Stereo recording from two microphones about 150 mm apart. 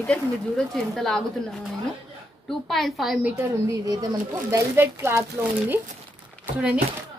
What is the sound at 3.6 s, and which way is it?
Speech, 25° right (ahead or behind).